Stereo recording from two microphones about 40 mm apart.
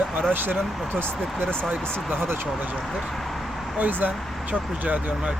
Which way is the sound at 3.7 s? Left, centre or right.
Right.